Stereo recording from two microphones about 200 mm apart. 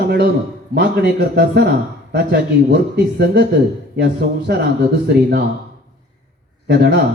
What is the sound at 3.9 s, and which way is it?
Speech, 55° right (ahead or behind).